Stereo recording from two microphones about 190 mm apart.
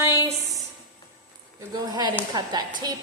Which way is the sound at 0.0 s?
15° right (ahead or behind).